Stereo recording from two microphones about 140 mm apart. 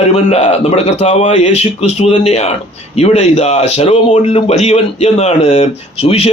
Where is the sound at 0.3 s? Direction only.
50° left (ahead or behind).